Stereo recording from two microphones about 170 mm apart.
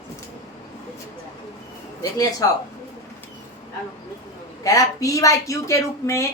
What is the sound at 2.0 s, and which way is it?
Speech, 20° left (ahead or behind).